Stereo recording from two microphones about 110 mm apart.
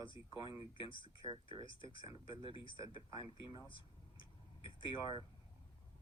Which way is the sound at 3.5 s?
45° left (ahead or behind).